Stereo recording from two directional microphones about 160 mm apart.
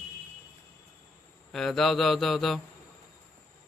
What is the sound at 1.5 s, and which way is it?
Mantra, centre (ahead or behind).